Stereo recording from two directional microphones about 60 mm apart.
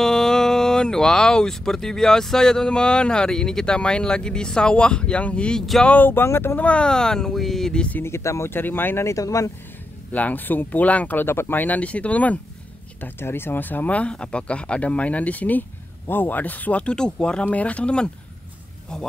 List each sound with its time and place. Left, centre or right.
0.0 s speech: centre
5.9 s speech: left
6.5 s speech: left; by 7.8 s centre
8.0 s speech: left
8.5 s speech: left
9.0 s speech: left
10.1 s speech: left
11.2 s speech: left
13.0 s speech: left; by 18.1 s centre